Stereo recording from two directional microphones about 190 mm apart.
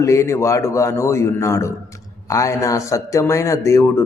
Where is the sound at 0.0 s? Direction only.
15° left (ahead or behind).